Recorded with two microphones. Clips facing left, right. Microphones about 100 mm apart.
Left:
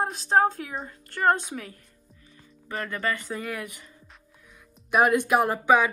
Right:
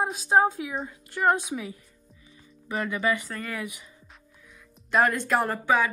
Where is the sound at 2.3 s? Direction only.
15° right (ahead or behind).